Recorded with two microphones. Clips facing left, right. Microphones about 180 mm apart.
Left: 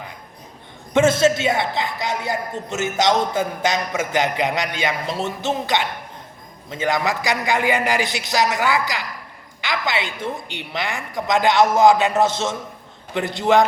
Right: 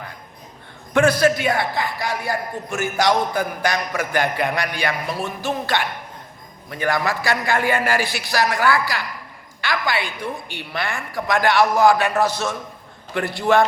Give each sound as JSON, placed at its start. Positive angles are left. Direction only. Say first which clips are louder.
{"t": 0.9, "sound": "a man's voice", "louder": "left 1 dB", "side_deg": 25}